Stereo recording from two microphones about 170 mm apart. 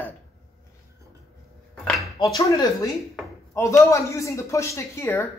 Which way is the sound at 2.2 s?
20° left (ahead or behind).